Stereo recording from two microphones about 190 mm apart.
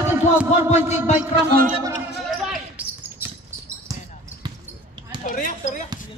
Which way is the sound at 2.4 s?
5° right (ahead or behind).